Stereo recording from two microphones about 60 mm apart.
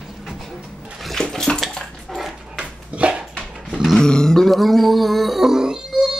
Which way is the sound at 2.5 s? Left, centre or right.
Centre.